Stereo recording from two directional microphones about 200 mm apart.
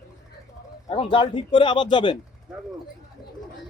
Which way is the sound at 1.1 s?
25° left (ahead or behind).